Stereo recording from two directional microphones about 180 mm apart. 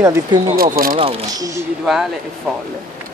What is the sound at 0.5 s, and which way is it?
Speech, 55° right (ahead or behind).